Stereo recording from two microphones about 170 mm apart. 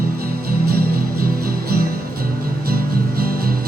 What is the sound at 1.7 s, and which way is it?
Music, 60° right (ahead or behind).